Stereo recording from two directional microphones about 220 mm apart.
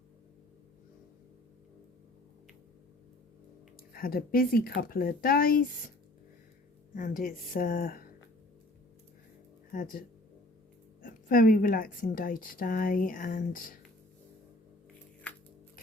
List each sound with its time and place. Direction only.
3.9 s speech: 40° left (ahead or behind)
6.9 s speech: 40° left (ahead or behind)
9.7 s speech: 35° left (ahead or behind)
11.0 s speech: 40° left (ahead or behind)